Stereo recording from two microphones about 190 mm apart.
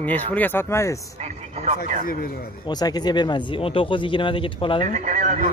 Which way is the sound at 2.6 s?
20° left (ahead or behind).